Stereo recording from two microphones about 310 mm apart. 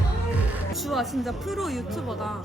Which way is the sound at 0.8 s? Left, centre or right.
Centre.